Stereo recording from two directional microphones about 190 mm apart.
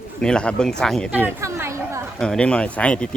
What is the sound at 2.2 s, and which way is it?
Speech, 5° left (ahead or behind).